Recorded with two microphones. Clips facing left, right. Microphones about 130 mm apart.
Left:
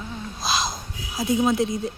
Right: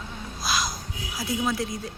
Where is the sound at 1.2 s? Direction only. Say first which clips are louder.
Left 7 dB; 20° left (ahead or behind).